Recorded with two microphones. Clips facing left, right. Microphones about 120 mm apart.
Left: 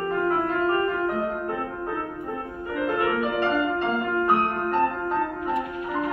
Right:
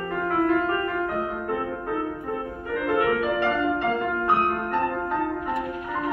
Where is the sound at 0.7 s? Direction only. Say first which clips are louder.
Left 2 dB; 30° left (ahead or behind).